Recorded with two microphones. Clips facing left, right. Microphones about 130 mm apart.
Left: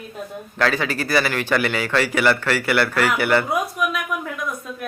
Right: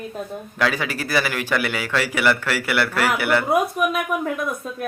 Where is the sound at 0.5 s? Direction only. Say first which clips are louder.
Left 2 dB; 5° right (ahead or behind).